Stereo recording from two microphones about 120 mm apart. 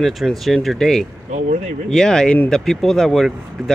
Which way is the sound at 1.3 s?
85° right.